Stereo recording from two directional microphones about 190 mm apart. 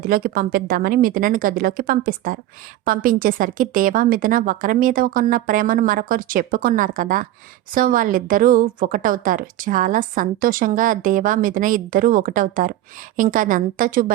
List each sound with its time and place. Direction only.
0.1 s a woman's voice: 50° right (ahead or behind)